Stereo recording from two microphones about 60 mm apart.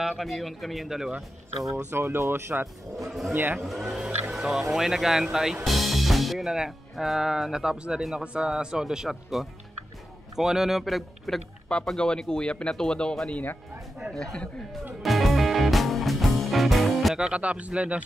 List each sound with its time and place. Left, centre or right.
0.0 s speech: centre
1.9 s speech: right
2.1 s speech: right
3.1 s speech: centre
11.7 s speech: centre
13.3 s speech: left
14.1 s speech: centre
15.0 s music: centre
17.2 s speech: right